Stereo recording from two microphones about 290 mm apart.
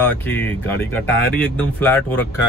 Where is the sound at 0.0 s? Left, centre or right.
Centre.